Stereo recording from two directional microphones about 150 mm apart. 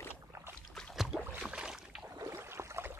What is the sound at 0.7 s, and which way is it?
Boat, 5° left (ahead or behind).